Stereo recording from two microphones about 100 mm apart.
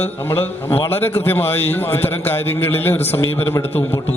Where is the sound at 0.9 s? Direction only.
20° left (ahead or behind).